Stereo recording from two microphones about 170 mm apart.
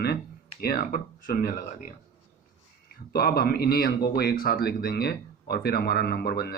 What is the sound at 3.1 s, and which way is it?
Speech, 65° left (ahead or behind).